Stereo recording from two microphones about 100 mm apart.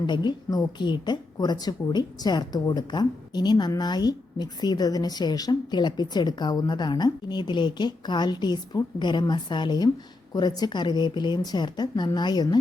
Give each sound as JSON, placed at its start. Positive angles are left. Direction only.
{"t": 0.0, "sound": "a woman's voice", "side_deg": 45}